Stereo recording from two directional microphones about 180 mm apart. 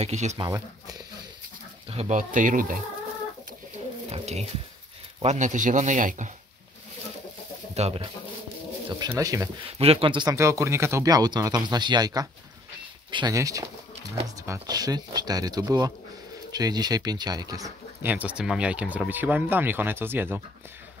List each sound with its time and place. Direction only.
0.0 s speech: 40° right (ahead or behind)
0.4 s speech: 20° right (ahead or behind)
1.9 s a man's voice: 35° right (ahead or behind)
4.1 s a man's voice: 35° right (ahead or behind)
7.7 s speech: 35° right (ahead or behind)
9.1 s speech: 15° right (ahead or behind)
9.7 s speech: 35° right (ahead or behind)
18.0 s speech: 10° right (ahead or behind)